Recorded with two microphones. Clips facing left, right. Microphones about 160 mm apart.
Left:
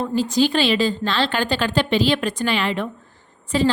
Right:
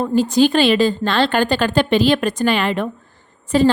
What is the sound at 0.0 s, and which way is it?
A woman's voice, 50° right (ahead or behind).